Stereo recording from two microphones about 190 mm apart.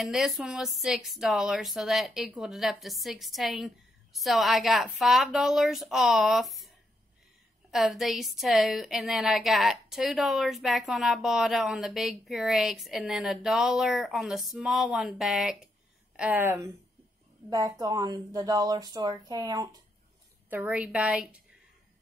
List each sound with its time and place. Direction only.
0.0 s speech: centre (ahead or behind)
7.7 s a woman's voice: centre (ahead or behind); by 19.8 s 20° right (ahead or behind)
20.4 s a woman's voice: 10° right (ahead or behind)